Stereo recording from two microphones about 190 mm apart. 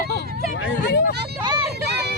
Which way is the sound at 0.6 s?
75° left (ahead or behind).